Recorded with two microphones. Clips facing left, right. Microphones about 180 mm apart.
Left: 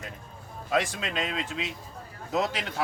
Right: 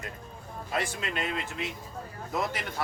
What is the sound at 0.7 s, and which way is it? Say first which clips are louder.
Speech: left 4 dB; 90° left.